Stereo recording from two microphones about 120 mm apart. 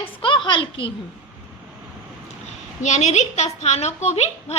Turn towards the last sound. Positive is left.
turn(degrees=60)  # may be behind; listen again after turning